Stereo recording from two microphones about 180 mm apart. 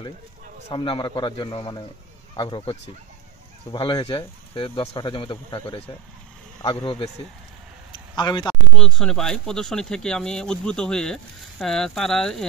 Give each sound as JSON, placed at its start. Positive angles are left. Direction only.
{"t": 0.7, "sound": "speech", "side_deg": 25}
{"t": 8.2, "sound": "speech", "side_deg": 25}
{"t": 8.7, "sound": "speech", "side_deg": 0}